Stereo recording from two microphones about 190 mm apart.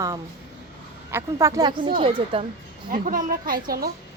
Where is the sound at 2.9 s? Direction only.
45° right (ahead or behind).